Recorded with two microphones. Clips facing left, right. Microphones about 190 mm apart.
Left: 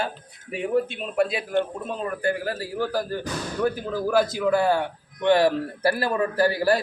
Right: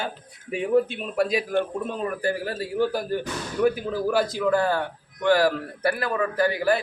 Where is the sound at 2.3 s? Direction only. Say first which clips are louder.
Right 2 dB; 25° right (ahead or behind).